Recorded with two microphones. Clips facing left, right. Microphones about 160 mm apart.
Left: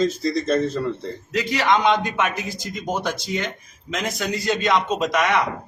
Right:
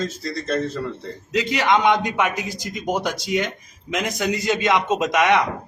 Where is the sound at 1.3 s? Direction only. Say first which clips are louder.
Right 1 dB; 20° right (ahead or behind).